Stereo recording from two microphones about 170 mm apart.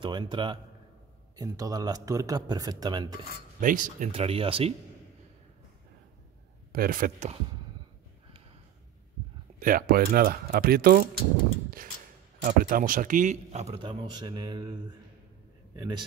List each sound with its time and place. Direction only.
0.0 s speech: 25° right (ahead or behind)
3.6 s speech: 50° right (ahead or behind)
4.1 s speech: 35° right (ahead or behind)
6.7 s speech: 60° right (ahead or behind)
9.6 s speech: 55° right (ahead or behind)
12.4 s speech: 55° right (ahead or behind)
13.8 s speech: 25° right (ahead or behind)
15.7 s a man's voice: 25° right (ahead or behind)